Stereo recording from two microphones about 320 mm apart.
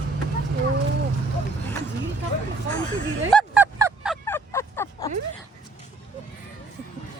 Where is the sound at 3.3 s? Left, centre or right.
Centre.